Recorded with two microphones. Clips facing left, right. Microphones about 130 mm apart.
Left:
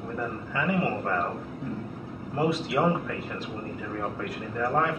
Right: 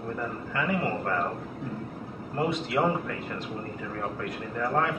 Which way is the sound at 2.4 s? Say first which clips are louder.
Left 1 dB; 5° left (ahead or behind).